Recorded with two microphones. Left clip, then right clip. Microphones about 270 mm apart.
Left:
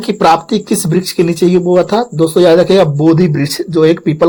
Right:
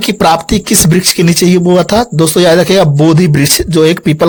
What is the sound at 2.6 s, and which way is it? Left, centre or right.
Speech, right.